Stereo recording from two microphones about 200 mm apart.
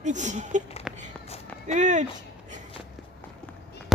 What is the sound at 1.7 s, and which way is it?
Speech, 35° right (ahead or behind).